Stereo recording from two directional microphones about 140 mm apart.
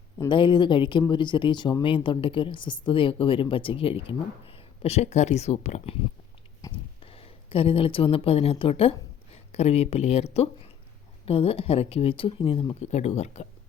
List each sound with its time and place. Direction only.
0.3 s a woman's voice: 35° left (ahead or behind)
12.8 s speech: 55° left (ahead or behind)